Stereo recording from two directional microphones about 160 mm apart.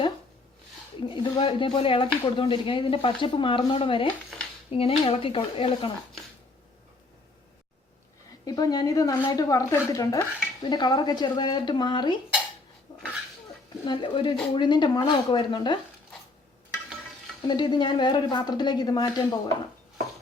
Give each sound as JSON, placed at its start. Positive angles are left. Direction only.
{"t": 1.0, "sound": "speech", "side_deg": 30}
{"t": 4.3, "sound": "a sound", "side_deg": 0}
{"t": 4.7, "sound": "speech", "side_deg": 35}
{"t": 8.4, "sound": "speech", "side_deg": 25}
{"t": 12.9, "sound": "a sound", "side_deg": 30}
{"t": 13.8, "sound": "speech", "side_deg": 30}
{"t": 17.5, "sound": "speech", "side_deg": 25}